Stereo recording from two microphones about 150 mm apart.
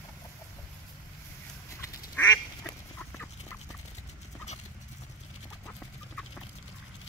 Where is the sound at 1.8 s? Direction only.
20° left (ahead or behind).